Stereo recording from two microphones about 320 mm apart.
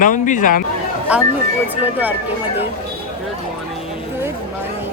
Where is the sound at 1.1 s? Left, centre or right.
Centre.